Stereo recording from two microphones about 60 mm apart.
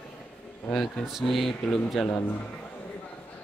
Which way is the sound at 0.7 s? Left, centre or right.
Centre.